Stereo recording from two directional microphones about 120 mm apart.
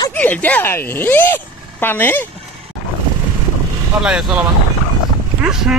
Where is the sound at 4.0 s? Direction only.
5° right (ahead or behind).